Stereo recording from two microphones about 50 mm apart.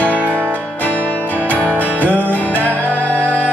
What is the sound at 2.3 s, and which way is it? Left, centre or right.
Music, left.